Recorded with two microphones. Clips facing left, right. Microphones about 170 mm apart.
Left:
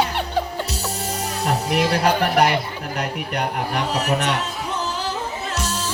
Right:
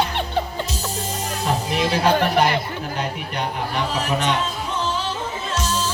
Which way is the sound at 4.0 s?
70° left (ahead or behind).